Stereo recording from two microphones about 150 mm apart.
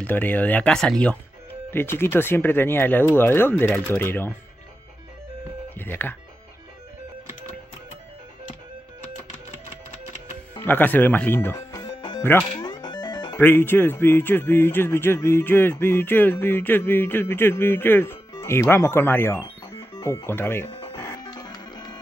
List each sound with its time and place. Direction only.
0.0 s speech: 10° left (ahead or behind)
5.8 s speech: 15° left (ahead or behind)
10.6 s speech: 10° left (ahead or behind)
11.8 s music: 30° left (ahead or behind)
12.2 s speech: 15° left (ahead or behind)
12.5 s music: 30° left (ahead or behind)
13.4 s speech: 15° left (ahead or behind)
20.9 s music: 20° left (ahead or behind)